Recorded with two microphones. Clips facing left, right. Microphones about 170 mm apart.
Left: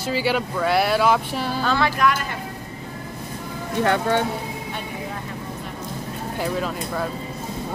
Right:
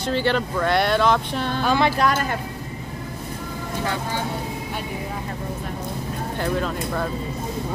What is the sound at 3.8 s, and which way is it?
Speech, 65° left (ahead or behind).